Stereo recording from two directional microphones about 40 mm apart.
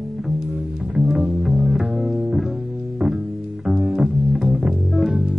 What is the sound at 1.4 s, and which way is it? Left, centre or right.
Music, centre.